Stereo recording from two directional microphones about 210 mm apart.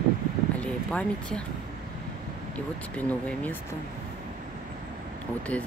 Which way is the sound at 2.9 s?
5° left (ahead or behind).